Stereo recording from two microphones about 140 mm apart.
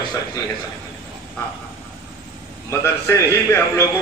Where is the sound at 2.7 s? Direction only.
20° left (ahead or behind).